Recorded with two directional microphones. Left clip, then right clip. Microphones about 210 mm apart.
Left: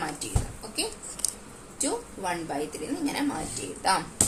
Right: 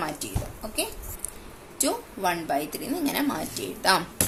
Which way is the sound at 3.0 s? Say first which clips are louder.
Right 2 dB; 55° right (ahead or behind).